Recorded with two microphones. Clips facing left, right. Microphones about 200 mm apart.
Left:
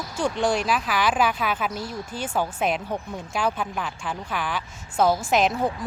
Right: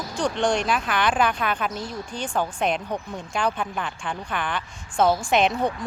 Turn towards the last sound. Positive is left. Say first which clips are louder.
# right 1 dB
turn(degrees=0)  # may be behind; listen again after turning